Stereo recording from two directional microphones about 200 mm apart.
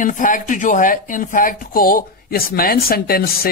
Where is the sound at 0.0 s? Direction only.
40° left (ahead or behind).